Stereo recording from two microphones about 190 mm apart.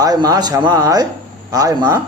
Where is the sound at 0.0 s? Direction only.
20° right (ahead or behind).